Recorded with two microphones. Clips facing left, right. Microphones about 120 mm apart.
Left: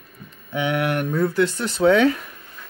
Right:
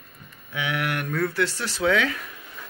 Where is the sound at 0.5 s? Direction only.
25° left (ahead or behind).